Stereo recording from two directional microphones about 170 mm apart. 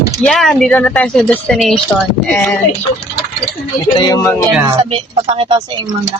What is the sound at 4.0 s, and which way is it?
Speech, 20° left (ahead or behind).